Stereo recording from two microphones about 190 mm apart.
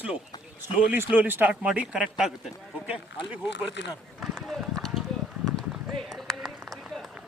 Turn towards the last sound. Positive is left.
turn(degrees=0)  # may be behind; listen again after turning